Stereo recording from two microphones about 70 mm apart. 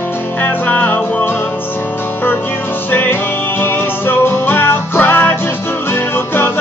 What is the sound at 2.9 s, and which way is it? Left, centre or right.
Music, left.